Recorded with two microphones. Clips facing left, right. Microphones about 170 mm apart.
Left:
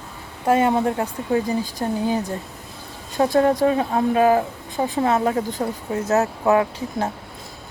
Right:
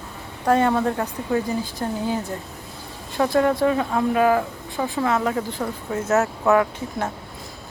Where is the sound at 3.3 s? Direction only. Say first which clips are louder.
Left 1 dB; 40° left (ahead or behind).